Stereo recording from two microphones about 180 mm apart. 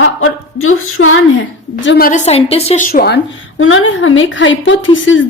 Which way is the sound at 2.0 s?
45° left (ahead or behind).